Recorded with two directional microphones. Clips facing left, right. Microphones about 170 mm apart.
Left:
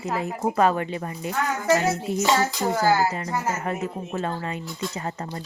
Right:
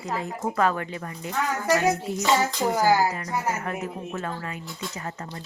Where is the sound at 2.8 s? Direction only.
15° right (ahead or behind).